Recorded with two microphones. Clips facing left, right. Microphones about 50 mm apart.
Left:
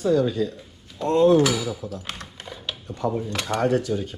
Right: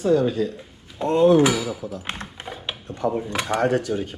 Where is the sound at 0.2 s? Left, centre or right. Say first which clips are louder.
Right 1 dB; right.